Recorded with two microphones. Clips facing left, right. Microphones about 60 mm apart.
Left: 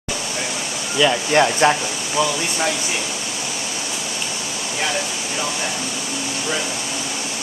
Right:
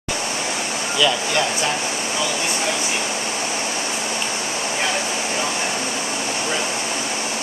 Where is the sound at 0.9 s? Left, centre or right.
Left.